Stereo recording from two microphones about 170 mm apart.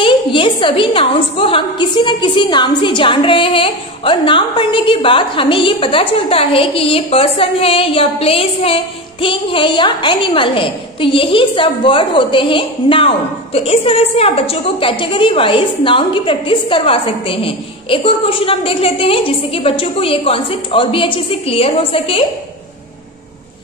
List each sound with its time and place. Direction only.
0.0 s a woman's voice: 30° left (ahead or behind)